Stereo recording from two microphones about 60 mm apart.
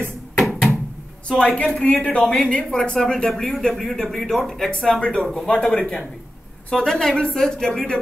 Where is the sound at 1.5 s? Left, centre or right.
Centre.